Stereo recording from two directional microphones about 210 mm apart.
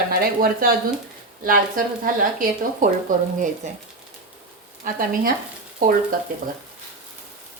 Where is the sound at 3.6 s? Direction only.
35° right (ahead or behind).